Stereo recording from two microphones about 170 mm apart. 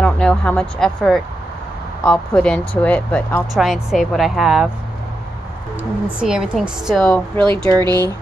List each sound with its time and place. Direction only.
0.0 s speech: 5° left (ahead or behind)
3.5 s a woman's voice: centre (ahead or behind)
6.1 s a woman's voice: 5° right (ahead or behind)
7.4 s speech: 30° right (ahead or behind)